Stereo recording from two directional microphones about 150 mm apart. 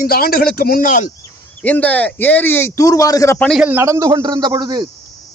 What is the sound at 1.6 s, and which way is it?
A man's voice, 10° left (ahead or behind).